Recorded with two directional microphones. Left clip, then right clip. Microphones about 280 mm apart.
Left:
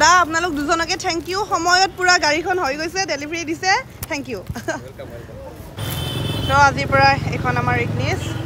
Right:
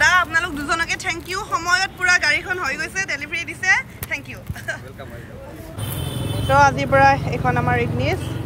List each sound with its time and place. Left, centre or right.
0.0 s speech: centre
6.5 s speech: centre